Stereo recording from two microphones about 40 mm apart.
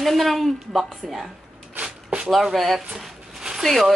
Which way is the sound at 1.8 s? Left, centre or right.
Right.